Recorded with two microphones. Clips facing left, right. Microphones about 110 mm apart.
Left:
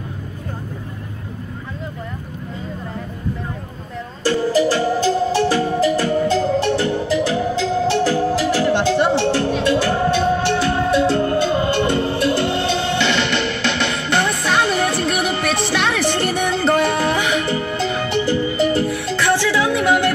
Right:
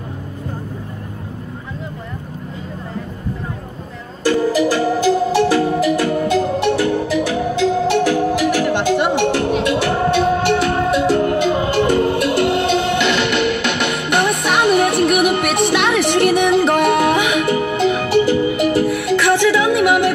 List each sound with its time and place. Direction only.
4.3 s music: 15° right (ahead or behind)
16.9 s music: 60° right (ahead or behind)
17.8 s music: 10° right (ahead or behind)